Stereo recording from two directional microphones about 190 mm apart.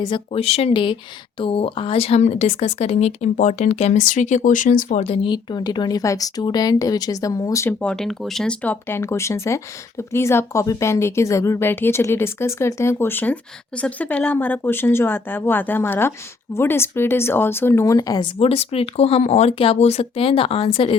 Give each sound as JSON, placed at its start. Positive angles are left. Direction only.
{"t": 0.0, "sound": "speech", "side_deg": 30}